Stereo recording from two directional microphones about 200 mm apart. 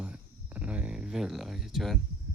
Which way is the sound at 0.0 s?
5° right (ahead or behind).